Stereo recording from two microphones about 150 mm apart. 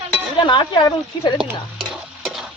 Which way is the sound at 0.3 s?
30° left (ahead or behind).